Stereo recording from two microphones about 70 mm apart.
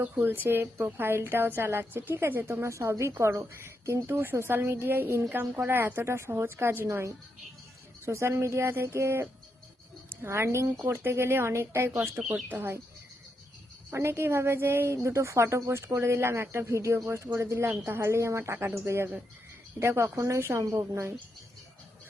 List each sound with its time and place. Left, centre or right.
0.2 s a woman's voice: right
4.1 s a woman's voice: right
8.0 s a woman's voice: right
13.9 s a woman's voice: right